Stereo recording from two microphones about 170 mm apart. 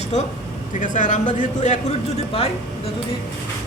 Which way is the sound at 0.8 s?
50° left (ahead or behind).